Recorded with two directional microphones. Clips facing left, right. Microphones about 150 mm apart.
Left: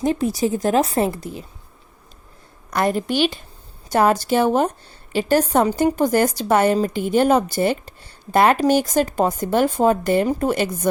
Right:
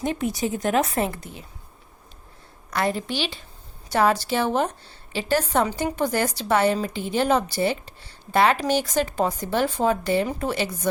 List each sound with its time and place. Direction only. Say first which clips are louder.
0.0 s a woman's voice: left 5 dB; 35° left (ahead or behind)
2.6 s speech: left 5 dB; 50° left (ahead or behind)